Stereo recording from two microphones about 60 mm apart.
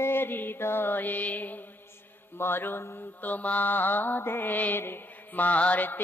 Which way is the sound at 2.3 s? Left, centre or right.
Left.